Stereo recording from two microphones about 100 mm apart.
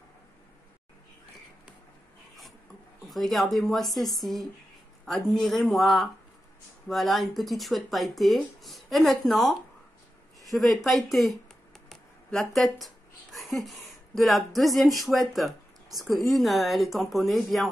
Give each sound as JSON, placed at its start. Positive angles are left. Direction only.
{"t": 3.1, "sound": "speech", "side_deg": 0}